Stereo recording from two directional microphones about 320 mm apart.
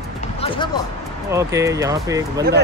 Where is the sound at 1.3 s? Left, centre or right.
Centre.